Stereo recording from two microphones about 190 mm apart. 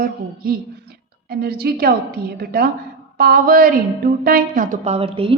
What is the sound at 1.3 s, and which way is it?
A woman's voice, 55° right (ahead or behind).